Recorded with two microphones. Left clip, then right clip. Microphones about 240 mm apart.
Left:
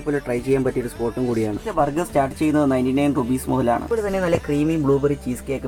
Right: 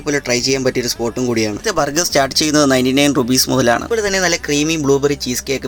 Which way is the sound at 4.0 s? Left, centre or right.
Right.